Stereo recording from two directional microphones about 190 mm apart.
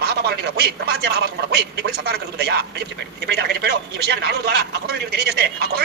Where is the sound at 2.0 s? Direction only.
55° right (ahead or behind).